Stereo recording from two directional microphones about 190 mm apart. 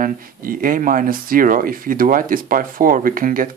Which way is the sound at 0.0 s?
50° right (ahead or behind).